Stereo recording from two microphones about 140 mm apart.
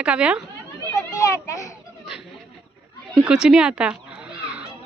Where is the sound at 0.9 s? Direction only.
25° left (ahead or behind).